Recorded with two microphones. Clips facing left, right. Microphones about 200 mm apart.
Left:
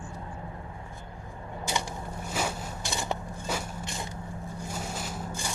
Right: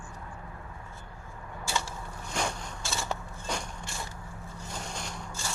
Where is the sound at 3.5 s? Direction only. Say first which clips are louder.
Left 2 dB; 5° left (ahead or behind).